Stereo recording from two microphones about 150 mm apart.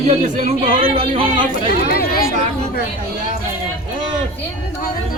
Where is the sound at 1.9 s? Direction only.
85° left.